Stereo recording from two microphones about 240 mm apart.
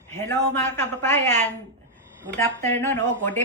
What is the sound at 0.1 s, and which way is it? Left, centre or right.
A man's voice, centre.